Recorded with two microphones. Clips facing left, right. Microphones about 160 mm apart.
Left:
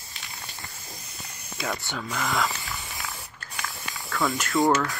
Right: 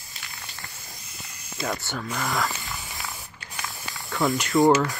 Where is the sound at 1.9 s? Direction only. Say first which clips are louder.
Even; centre (ahead or behind).